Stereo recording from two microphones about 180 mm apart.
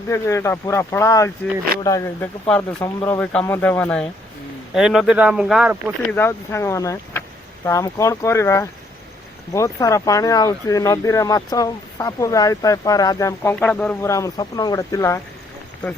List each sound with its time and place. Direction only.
0.1 s speech: 15° left (ahead or behind)
4.7 s speech: 5° right (ahead or behind)
6.1 s speech: 10° left (ahead or behind)